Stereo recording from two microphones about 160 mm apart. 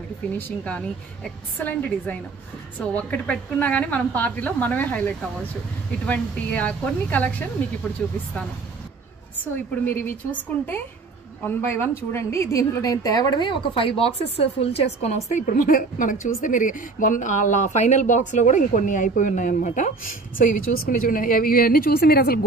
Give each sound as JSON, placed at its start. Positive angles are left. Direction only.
{"t": 0.4, "sound": "a woman's voice", "side_deg": 10}
{"t": 9.8, "sound": "a woman's voice", "side_deg": 10}
{"t": 11.4, "sound": "a woman's voice", "side_deg": 15}